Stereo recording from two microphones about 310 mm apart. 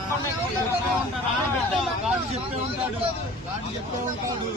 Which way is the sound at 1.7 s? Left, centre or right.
Centre.